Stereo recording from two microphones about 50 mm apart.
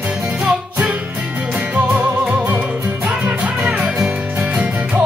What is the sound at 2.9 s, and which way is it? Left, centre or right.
Music, right.